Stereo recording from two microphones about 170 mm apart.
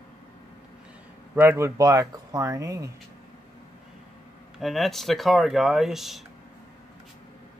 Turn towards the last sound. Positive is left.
turn(degrees=0)  # may be behind; listen again after turning